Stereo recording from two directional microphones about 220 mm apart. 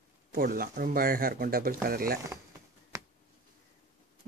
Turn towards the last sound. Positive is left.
turn(degrees=-15)  # may be behind; listen again after turning